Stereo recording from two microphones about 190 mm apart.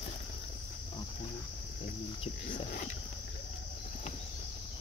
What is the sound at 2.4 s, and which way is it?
Speech, 45° left (ahead or behind).